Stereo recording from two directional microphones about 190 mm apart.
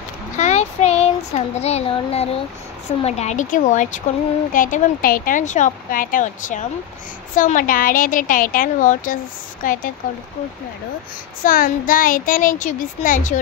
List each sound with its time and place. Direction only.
0.4 s a sound: 35° left (ahead or behind)
1.6 s a woman's voice: 35° left (ahead or behind)
11.4 s a woman's voice: 45° left (ahead or behind)